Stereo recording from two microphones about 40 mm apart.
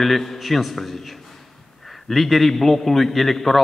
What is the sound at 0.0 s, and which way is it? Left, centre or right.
A man's voice, centre.